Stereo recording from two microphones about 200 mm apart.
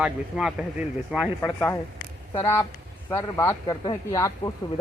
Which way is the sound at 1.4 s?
15° left (ahead or behind).